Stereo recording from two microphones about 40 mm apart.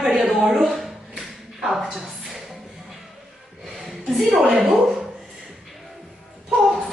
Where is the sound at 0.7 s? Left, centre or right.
Centre.